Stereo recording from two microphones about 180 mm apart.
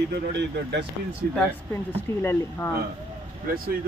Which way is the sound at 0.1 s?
65° right (ahead or behind).